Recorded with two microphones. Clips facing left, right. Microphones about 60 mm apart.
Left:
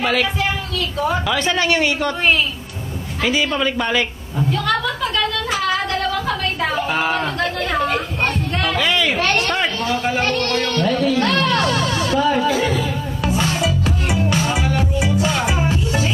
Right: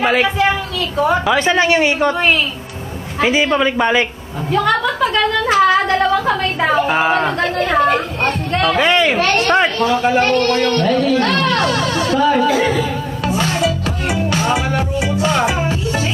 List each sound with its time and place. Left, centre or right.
0.0 s a woman's voice: right
3.2 s a woman's voice: right
7.8 s a woman's voice: right
8.7 s speech: right
9.9 s speech: centre
12.5 s music: centre
13.2 s music: centre